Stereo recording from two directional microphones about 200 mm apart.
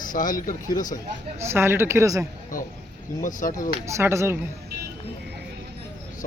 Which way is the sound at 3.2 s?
40° left (ahead or behind).